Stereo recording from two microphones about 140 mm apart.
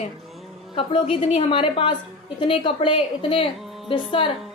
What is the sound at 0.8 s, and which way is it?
A woman's voice, 40° left (ahead or behind).